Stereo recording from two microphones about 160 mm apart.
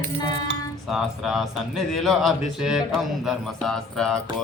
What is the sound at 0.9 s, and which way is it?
Speech, centre (ahead or behind).